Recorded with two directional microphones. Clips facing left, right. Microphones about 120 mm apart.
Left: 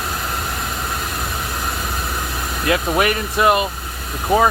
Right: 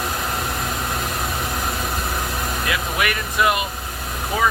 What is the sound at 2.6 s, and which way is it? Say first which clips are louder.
Speech: left 8 dB; 40° left (ahead or behind).